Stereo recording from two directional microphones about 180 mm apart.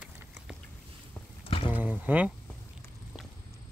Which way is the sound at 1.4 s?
30° left (ahead or behind).